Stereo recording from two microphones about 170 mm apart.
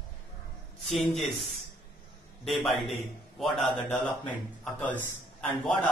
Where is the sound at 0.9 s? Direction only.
Centre (ahead or behind).